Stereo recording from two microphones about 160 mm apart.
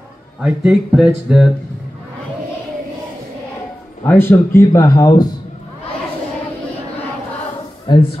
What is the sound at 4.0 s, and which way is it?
Speech, 15° left (ahead or behind).